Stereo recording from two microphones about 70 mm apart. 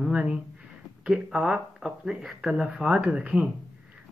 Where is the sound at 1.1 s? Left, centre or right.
Centre.